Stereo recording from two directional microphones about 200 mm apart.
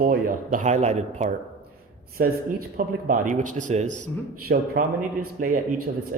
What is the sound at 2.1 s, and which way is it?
Speech, 50° right (ahead or behind).